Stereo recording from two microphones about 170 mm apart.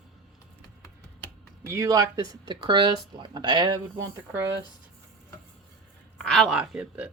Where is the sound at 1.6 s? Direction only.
15° right (ahead or behind).